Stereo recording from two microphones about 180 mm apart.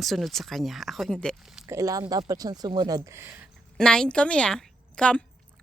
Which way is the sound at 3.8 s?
5° left (ahead or behind).